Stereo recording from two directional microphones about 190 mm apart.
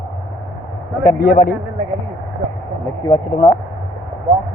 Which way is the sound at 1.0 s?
50° left (ahead or behind).